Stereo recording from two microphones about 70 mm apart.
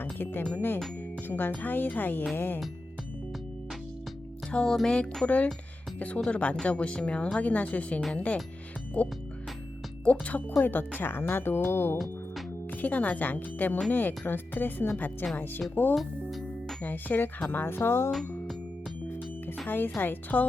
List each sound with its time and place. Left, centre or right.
0.0 s speech: left
4.5 s speech: centre
9.0 s music: centre
10.0 s speech: centre
16.0 s music: centre
16.8 s speech: left
18.1 s music: centre
19.6 s speech: left